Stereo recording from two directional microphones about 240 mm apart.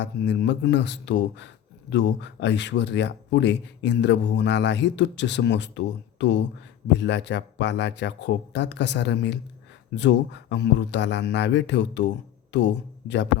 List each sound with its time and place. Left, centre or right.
0.0 s speech: left